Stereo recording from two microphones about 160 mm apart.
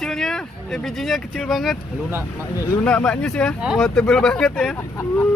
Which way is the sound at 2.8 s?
5° left (ahead or behind).